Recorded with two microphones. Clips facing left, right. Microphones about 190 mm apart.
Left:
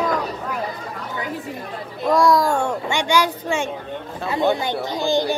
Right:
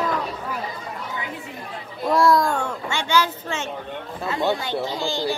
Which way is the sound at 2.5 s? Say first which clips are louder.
Left 5 dB; 15° left (ahead or behind).